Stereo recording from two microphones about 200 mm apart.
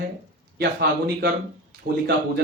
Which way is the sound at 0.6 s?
55° right (ahead or behind).